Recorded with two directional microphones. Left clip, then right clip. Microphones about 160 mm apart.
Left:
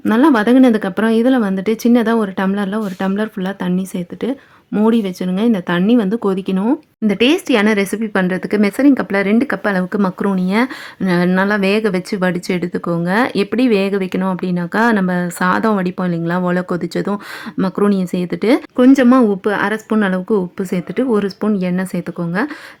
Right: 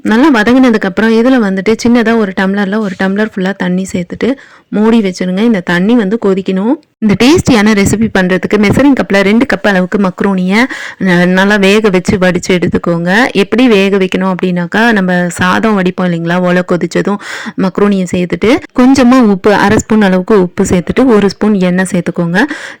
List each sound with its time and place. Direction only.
0.0 s speech: 20° right (ahead or behind)
7.1 s speech: 30° right (ahead or behind)